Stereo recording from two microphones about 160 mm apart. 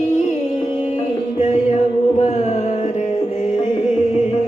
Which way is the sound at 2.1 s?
45° left (ahead or behind).